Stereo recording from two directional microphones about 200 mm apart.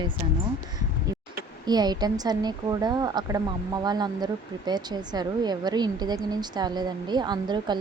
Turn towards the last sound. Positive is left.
turn(degrees=-20)  # may be behind; listen again after turning